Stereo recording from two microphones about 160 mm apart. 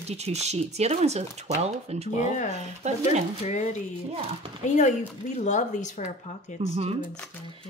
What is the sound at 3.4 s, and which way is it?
Speech, 45° left (ahead or behind).